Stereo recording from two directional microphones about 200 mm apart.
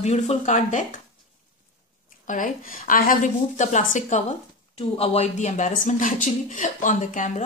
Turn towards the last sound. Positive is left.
turn(degrees=35)  # may be behind; listen again after turning